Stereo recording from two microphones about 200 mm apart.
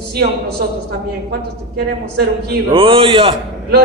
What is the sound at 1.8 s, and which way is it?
Speech, 50° right (ahead or behind).